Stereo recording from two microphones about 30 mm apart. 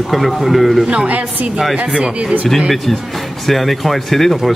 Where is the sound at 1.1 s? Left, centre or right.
Right.